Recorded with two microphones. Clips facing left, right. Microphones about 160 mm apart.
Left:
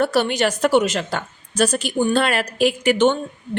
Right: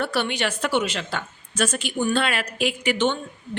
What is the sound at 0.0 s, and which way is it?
A woman's voice, 40° left (ahead or behind).